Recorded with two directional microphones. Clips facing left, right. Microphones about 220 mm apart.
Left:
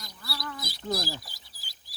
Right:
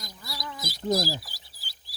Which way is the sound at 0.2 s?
15° right (ahead or behind).